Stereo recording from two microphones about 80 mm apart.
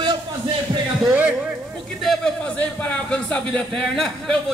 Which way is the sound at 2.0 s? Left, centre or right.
Centre.